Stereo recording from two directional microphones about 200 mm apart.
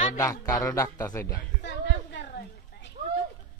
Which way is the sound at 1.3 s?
60° left (ahead or behind).